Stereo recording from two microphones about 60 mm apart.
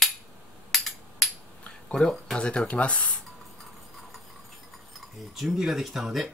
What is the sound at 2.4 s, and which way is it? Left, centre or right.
Cutlery, centre.